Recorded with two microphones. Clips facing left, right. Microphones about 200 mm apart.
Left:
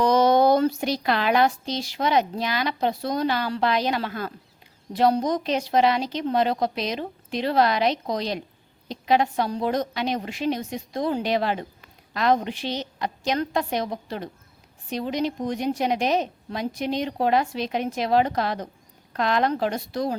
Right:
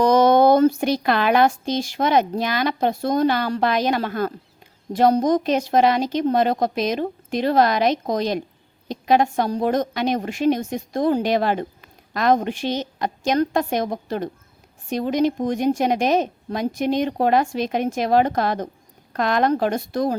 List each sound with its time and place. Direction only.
0.0 s speech: 50° right (ahead or behind)